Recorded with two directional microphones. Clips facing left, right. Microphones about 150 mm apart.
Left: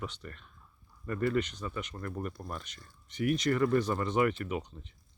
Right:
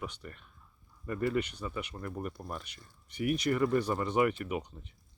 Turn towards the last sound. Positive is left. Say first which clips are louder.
# even
turn(degrees=-10)  # may be behind; listen again after turning